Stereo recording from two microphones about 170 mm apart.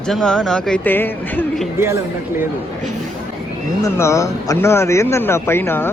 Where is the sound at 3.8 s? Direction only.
15° left (ahead or behind).